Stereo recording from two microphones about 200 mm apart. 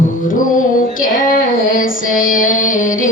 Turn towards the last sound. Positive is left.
turn(degrees=40)  # may be behind; listen again after turning